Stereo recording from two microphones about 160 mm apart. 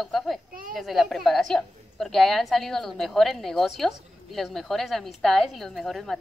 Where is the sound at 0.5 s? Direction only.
60° right (ahead or behind).